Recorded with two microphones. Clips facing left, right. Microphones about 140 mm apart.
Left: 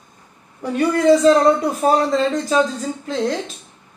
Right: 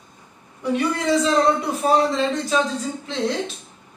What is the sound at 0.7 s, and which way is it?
Speech, 45° left (ahead or behind).